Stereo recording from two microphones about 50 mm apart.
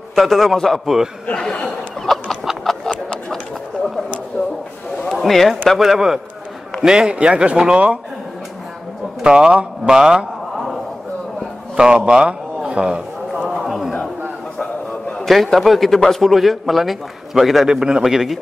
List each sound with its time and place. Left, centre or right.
0.1 s a man's voice: centre
1.3 s speech: centre
2.1 s chicken: centre
2.6 s a sound: centre
4.3 s a sound: left
5.1 s a sound: centre
5.7 s a man's voice: centre; by 8.0 s right
9.2 s a man's voice: centre
11.7 s a man's voice: centre
13.6 s a sound: centre
15.2 s a man's voice: centre
17.6 s a man's voice: centre